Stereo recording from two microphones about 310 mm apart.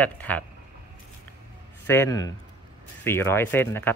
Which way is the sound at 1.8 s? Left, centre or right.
Centre.